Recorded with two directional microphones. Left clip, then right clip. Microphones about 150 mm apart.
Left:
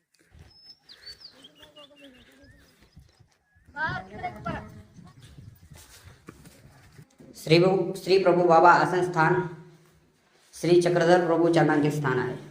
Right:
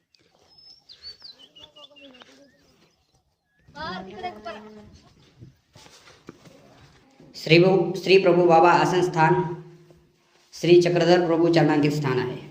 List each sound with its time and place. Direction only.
1.6 s a sound: centre (ahead or behind)
7.3 s a man's voice: 20° right (ahead or behind)
10.5 s a man's voice: 20° right (ahead or behind)